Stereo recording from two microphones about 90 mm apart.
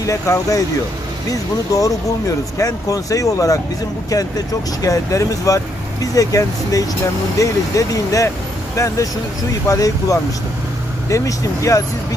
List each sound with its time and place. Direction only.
0.0 s speech: 40° left (ahead or behind)
1.7 s speech: 40° left (ahead or behind)
4.8 s speech: 40° left (ahead or behind)